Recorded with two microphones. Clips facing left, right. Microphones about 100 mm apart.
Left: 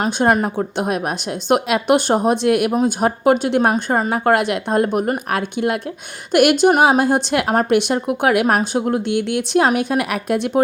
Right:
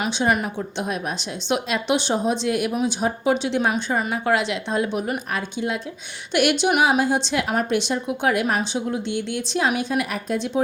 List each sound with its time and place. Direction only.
0.0 s a woman's voice: 45° left (ahead or behind); by 10.6 s 60° left (ahead or behind)